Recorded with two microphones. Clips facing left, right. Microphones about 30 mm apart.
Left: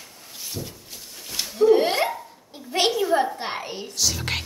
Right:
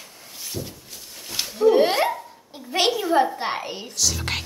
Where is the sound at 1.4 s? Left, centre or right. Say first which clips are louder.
Even; centre.